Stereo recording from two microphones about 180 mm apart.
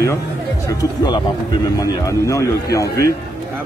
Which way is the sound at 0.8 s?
20° left (ahead or behind).